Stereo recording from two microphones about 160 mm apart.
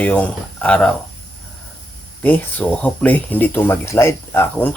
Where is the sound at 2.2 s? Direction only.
10° left (ahead or behind).